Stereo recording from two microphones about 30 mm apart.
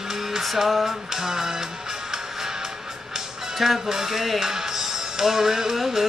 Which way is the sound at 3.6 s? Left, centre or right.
Centre.